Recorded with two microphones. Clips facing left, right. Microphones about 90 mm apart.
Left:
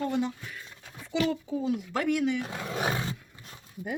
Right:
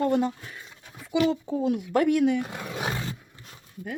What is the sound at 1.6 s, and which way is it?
Speech, 50° right (ahead or behind).